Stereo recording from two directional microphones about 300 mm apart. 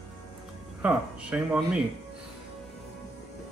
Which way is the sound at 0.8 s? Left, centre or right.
Centre.